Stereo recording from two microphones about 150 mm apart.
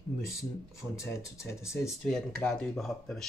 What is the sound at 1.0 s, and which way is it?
Speech, 20° left (ahead or behind).